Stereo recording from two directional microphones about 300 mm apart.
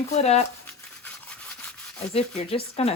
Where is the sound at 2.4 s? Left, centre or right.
Centre.